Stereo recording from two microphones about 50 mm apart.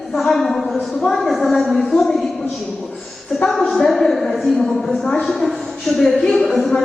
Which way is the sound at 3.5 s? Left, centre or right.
Centre.